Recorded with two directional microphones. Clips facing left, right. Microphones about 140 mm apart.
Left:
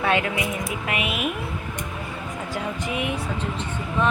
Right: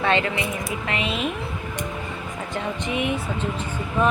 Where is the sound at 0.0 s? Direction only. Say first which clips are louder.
Right 1 dB; 10° left (ahead or behind).